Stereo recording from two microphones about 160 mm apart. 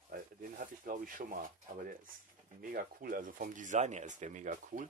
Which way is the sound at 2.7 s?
60° right (ahead or behind).